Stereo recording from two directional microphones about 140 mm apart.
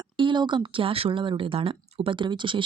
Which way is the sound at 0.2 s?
35° right (ahead or behind).